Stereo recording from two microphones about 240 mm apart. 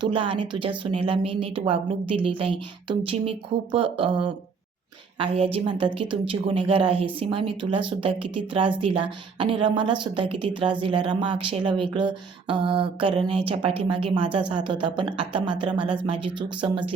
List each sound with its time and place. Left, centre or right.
0.0 s a woman's voice: right